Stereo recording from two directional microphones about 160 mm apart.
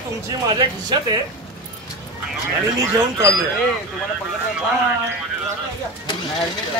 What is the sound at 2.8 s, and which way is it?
Speech, 20° right (ahead or behind).